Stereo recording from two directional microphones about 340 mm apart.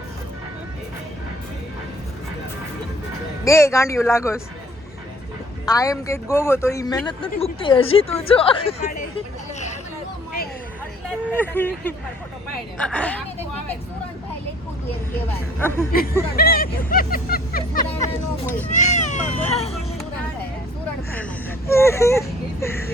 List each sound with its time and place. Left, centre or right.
3.4 s a man's voice: centre
5.6 s a man's voice: centre
11.3 s speech: centre
15.5 s a man's voice: centre
16.3 s speech: left
21.7 s a man's voice: centre